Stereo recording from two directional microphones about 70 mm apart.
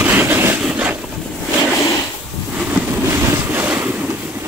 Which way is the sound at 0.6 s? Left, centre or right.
Centre.